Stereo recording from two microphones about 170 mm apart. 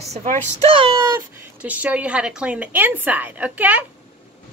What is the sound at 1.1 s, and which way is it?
A woman's voice, 10° right (ahead or behind).